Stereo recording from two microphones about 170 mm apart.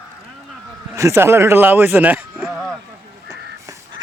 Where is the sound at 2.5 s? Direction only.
Centre (ahead or behind).